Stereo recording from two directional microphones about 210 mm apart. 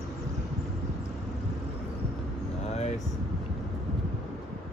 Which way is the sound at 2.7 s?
30° left (ahead or behind).